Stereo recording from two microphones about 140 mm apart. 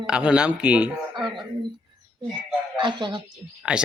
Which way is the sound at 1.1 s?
35° right (ahead or behind).